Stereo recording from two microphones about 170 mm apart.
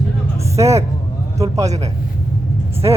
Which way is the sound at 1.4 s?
20° right (ahead or behind).